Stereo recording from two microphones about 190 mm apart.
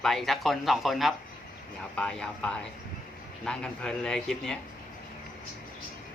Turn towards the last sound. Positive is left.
turn(degrees=5)  # may be behind; listen again after turning